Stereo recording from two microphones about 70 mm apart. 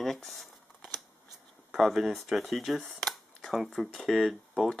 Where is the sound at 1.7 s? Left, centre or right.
Centre.